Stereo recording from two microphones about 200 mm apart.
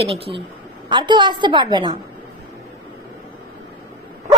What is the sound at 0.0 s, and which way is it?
Speech, 30° right (ahead or behind).